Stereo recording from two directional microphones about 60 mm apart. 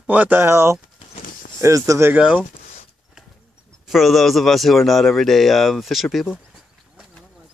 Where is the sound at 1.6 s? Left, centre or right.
Right.